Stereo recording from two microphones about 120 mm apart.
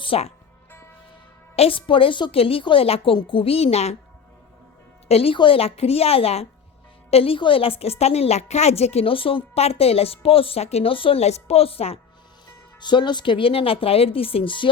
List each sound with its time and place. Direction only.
0.0 s speech: 55° left (ahead or behind)
1.5 s a woman's voice: 50° left (ahead or behind)
5.0 s a woman's voice: 55° left (ahead or behind)
12.8 s a woman's voice: 40° left (ahead or behind)